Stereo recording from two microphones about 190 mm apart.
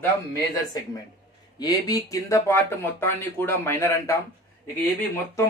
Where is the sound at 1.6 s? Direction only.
20° left (ahead or behind).